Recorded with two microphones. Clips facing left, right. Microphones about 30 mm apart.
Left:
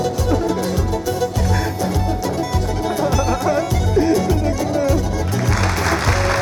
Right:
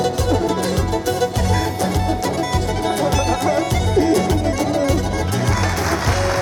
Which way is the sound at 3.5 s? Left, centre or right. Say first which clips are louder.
Even; centre.